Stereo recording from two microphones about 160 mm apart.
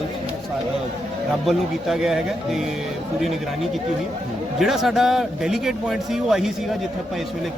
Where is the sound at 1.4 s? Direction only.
Centre (ahead or behind).